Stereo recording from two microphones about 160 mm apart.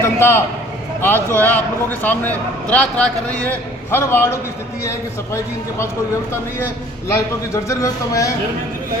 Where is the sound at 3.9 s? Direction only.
15° left (ahead or behind).